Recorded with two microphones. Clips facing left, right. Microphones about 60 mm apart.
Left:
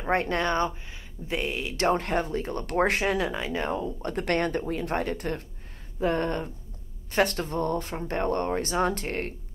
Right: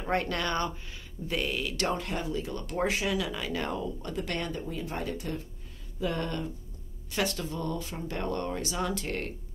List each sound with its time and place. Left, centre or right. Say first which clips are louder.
0.0 s speech: left 4 dB; left
2.0 s speech: left 5 dB; left
4.0 s speech: left 7 dB; left
5.9 s speech: left 6 dB; left